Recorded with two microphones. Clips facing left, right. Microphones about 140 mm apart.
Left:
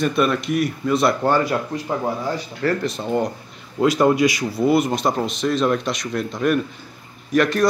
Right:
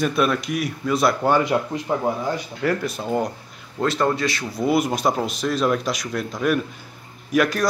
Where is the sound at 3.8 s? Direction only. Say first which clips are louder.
Left 5 dB; 10° left (ahead or behind).